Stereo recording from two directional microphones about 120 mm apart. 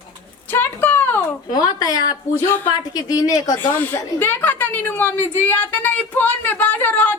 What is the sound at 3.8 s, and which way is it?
A woman's voice, 15° left (ahead or behind).